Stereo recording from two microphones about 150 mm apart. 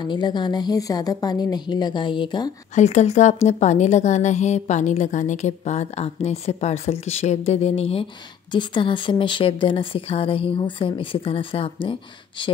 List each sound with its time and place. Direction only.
0.0 s a woman's voice: 30° left (ahead or behind)
2.7 s a woman's voice: 50° left (ahead or behind); by 12.4 s 35° left (ahead or behind)